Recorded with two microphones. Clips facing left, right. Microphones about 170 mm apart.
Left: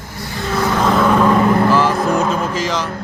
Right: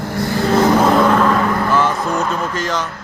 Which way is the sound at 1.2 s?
20° left (ahead or behind).